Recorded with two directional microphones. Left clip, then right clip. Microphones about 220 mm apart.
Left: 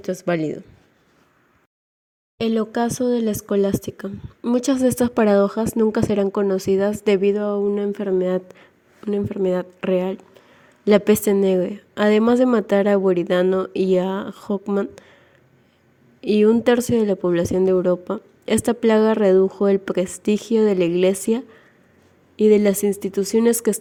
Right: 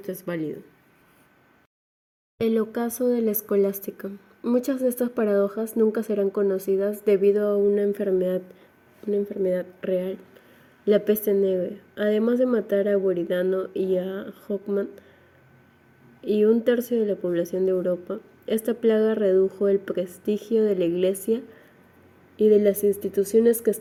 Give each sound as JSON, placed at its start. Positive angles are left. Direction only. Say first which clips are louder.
{"t": 0.0, "sound": "speech", "louder": "left 8 dB", "side_deg": 30}
{"t": 2.5, "sound": "speech", "louder": "left 4 dB", "side_deg": 30}
{"t": 16.2, "sound": "speech", "louder": "left 4 dB", "side_deg": 35}
{"t": 22.4, "sound": "speech", "louder": "left 2 dB", "side_deg": 40}